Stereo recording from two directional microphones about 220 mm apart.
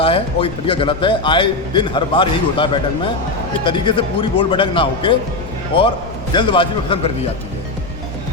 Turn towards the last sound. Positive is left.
turn(degrees=25)  # may be behind; listen again after turning